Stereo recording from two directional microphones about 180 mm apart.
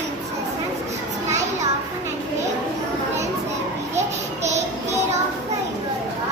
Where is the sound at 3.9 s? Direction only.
40° right (ahead or behind).